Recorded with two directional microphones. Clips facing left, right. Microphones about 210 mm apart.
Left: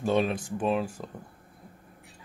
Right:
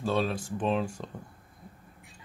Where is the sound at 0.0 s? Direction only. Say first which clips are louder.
Left 3 dB; 20° left (ahead or behind).